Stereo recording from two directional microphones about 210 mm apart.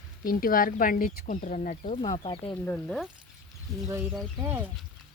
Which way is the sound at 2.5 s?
10° left (ahead or behind).